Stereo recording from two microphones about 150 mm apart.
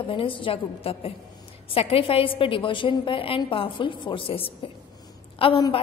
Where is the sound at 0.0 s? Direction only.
35° left (ahead or behind).